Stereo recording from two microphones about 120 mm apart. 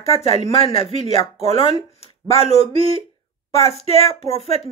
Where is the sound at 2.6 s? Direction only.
50° right (ahead or behind).